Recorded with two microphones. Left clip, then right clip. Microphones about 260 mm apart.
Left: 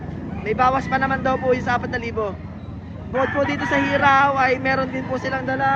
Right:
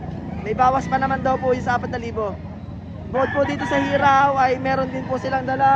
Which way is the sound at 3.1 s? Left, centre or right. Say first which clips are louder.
Even; right.